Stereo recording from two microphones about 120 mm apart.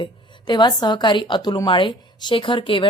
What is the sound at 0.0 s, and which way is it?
A woman's voice, 40° left (ahead or behind).